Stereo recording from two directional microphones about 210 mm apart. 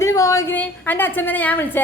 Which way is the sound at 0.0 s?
15° left (ahead or behind).